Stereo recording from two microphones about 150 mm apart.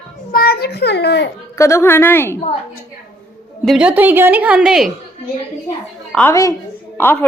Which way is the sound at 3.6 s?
5° right (ahead or behind).